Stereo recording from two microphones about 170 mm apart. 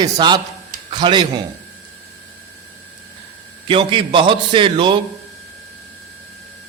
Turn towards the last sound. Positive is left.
turn(degrees=-30)  # may be behind; listen again after turning